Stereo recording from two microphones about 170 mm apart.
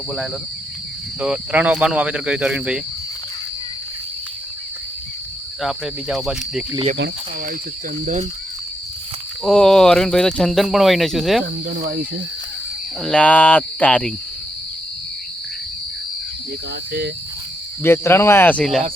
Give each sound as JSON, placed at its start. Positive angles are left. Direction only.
{"t": 1.2, "sound": "speech", "side_deg": -5}
{"t": 5.6, "sound": "speech", "side_deg": 0}
{"t": 6.9, "sound": "speech", "side_deg": -90}
{"t": 9.4, "sound": "speech", "side_deg": 5}
{"t": 11.8, "sound": "speech", "side_deg": -65}
{"t": 13.0, "sound": "speech", "side_deg": 5}
{"t": 17.8, "sound": "speech", "side_deg": 15}